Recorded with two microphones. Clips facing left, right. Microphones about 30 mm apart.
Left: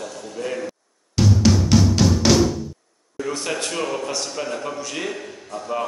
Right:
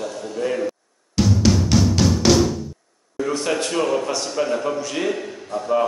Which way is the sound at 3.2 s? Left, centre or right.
Centre.